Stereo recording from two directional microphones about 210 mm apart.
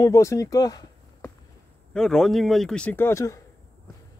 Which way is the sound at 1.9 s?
Centre (ahead or behind).